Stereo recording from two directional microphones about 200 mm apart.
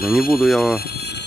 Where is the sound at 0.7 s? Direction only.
50° left (ahead or behind).